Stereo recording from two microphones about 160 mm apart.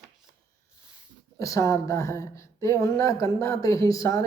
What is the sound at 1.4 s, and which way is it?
Speech, 20° left (ahead or behind).